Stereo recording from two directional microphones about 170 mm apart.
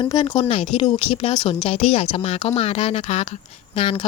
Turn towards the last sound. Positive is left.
turn(degrees=35)  # may be behind; listen again after turning